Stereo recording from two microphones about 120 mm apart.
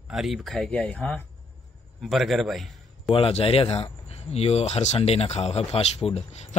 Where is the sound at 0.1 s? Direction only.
Centre (ahead or behind).